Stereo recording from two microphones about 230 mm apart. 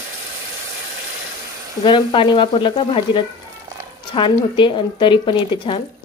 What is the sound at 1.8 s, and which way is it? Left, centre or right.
A woman's voice, left.